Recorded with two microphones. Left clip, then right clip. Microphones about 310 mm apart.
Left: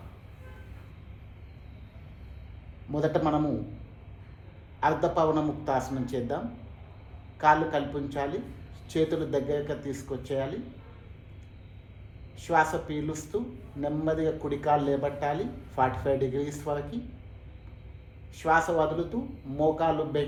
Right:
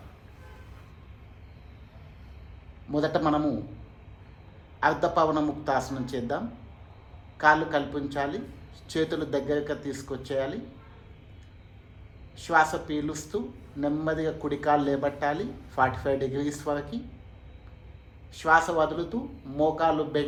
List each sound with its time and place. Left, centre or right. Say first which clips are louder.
2.9 s a man's voice: right 1 dB; right
4.8 s a man's voice: right 2 dB; right
12.4 s a man's voice: right 2 dB; right
18.3 s a man's voice: right 2 dB; right